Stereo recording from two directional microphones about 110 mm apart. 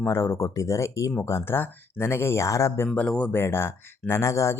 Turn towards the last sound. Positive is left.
turn(degrees=25)  # may be behind; listen again after turning